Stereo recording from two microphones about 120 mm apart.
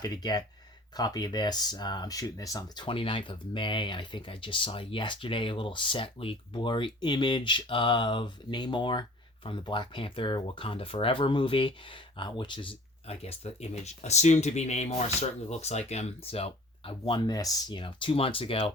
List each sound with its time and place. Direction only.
0.0 s speech: 35° left (ahead or behind)
2.8 s speech: 45° left (ahead or behind)
13.1 s speech: 60° left (ahead or behind); by 17.7 s 30° left (ahead or behind)
17.7 s speech: 45° left (ahead or behind)